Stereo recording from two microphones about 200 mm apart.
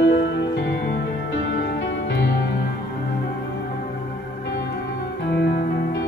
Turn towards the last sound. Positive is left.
turn(degrees=60)  # may be behind; listen again after turning